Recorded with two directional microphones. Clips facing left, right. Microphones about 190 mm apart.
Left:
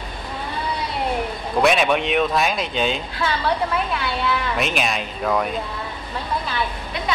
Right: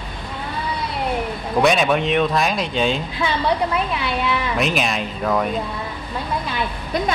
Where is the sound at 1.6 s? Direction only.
Centre (ahead or behind).